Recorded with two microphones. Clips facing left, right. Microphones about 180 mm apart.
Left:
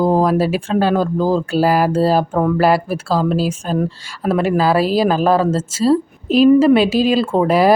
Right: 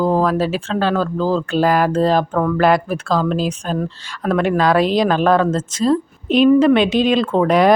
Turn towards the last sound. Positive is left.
turn(degrees=5)  # may be behind; listen again after turning